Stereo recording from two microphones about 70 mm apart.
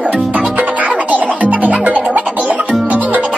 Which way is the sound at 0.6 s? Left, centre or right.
Centre.